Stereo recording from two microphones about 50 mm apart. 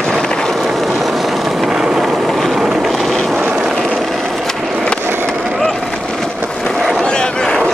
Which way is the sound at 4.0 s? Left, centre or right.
Centre.